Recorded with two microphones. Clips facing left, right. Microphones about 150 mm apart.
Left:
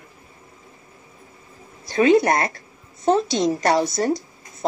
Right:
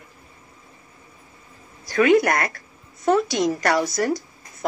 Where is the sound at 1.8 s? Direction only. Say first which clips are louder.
Left 1 dB; 25° left (ahead or behind).